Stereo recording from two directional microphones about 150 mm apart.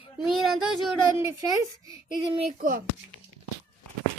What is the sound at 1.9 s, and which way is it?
Child singing, 30° right (ahead or behind).